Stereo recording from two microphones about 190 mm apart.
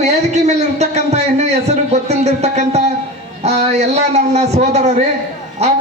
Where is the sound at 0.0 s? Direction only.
35° right (ahead or behind).